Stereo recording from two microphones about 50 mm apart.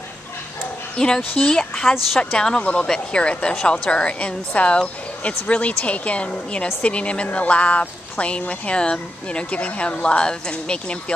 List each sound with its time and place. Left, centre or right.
0.9 s speech: centre